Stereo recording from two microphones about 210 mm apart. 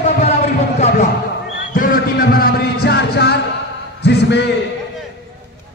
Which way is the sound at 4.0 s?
55° left (ahead or behind).